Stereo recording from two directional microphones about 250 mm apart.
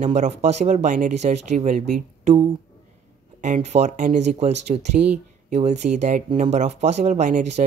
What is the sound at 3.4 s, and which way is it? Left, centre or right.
Speech, right.